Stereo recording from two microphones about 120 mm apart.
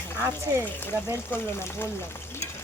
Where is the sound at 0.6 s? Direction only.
15° left (ahead or behind).